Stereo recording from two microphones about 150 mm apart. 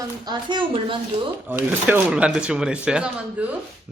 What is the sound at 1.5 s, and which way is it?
A man's voice, 10° right (ahead or behind).